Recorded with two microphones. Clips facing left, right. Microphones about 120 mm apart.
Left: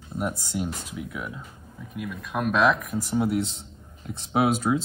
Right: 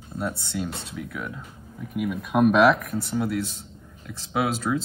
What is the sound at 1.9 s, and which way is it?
Speech, 5° right (ahead or behind).